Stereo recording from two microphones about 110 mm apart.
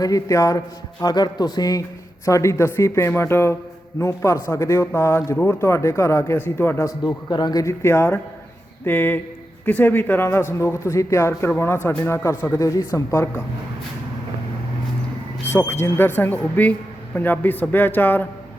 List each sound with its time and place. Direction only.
0.0 s speech: 30° left (ahead or behind)
6.8 s speech: 40° left (ahead or behind)
7.6 s a man's voice: 25° left (ahead or behind)
15.4 s a man's voice: 20° left (ahead or behind)